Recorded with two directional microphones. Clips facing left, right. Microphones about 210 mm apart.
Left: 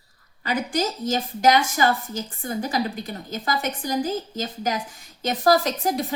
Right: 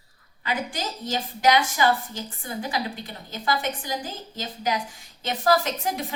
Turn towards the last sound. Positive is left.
turn(degrees=40)  # may be behind; listen again after turning